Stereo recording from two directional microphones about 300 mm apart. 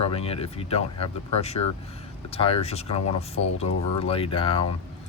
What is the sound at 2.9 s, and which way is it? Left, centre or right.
Speech, left.